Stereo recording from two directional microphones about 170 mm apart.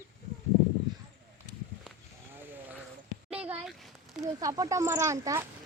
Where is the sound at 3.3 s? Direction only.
5° right (ahead or behind).